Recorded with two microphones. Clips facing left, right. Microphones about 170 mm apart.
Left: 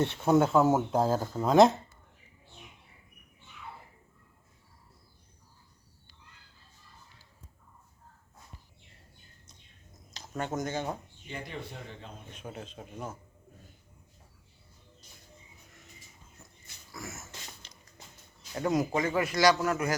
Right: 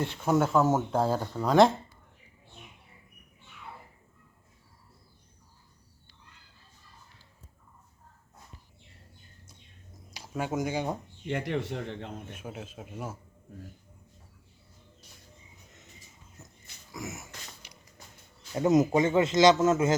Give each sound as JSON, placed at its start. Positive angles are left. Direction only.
{"t": 0.0, "sound": "speech", "side_deg": 20}
{"t": 10.1, "sound": "speech", "side_deg": -10}
{"t": 11.3, "sound": "a man's voice", "side_deg": -75}
{"t": 12.3, "sound": "speech", "side_deg": -5}
{"t": 16.9, "sound": "a sound", "side_deg": -15}
{"t": 18.5, "sound": "a man's voice", "side_deg": -20}